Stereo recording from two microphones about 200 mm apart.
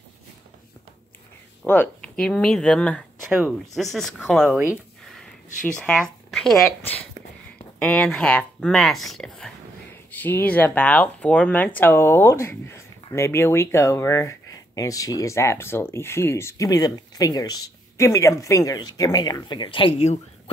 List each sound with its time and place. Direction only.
1.6 s speech: 10° left (ahead or behind)
5.7 s speech: 5° left (ahead or behind); by 20.5 s 30° left (ahead or behind)